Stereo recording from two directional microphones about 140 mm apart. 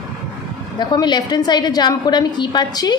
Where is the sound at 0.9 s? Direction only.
30° left (ahead or behind).